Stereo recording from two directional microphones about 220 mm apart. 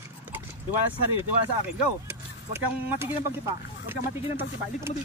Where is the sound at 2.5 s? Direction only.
10° right (ahead or behind).